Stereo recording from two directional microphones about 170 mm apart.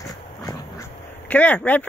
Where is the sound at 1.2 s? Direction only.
10° left (ahead or behind).